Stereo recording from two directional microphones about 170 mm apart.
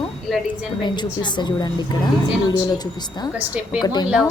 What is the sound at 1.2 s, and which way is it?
A woman's voice, 25° left (ahead or behind).